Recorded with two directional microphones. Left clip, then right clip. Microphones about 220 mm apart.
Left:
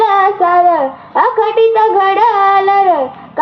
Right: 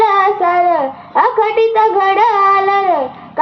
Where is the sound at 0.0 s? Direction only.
30° left (ahead or behind).